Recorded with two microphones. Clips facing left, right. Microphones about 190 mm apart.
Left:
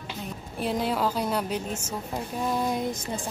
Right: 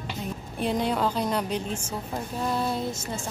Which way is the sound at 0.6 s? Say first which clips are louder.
Right 1 dB; 5° left (ahead or behind).